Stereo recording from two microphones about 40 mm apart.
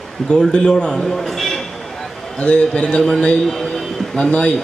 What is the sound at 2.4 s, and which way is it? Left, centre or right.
A man's voice, left.